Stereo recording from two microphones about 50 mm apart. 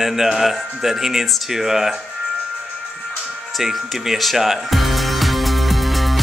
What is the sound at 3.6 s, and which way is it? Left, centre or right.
Music, centre.